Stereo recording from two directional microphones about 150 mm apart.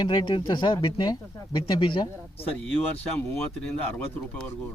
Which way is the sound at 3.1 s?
10° left (ahead or behind).